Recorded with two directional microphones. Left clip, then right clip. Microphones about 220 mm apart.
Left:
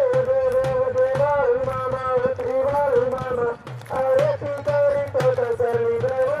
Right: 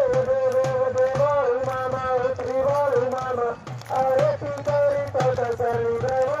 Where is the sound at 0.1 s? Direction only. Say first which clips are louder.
Left 2 dB; 20° left (ahead or behind).